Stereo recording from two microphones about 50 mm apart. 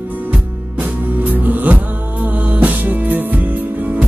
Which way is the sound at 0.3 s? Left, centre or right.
Right.